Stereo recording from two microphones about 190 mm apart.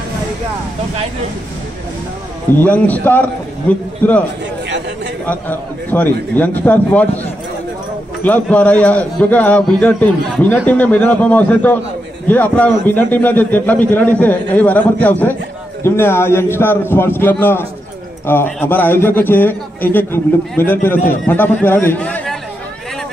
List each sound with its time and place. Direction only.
2.6 s a man's voice: 10° left (ahead or behind)
4.6 s chatter: 65° right (ahead or behind)
5.2 s a man's voice: 10° left (ahead or behind)
8.2 s a man's voice: 5° left (ahead or behind)